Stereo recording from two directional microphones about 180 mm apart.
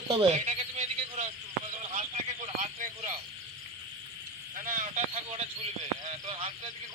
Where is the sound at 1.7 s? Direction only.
45° right (ahead or behind).